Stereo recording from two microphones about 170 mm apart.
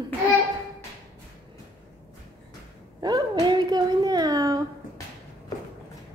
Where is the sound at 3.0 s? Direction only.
25° right (ahead or behind).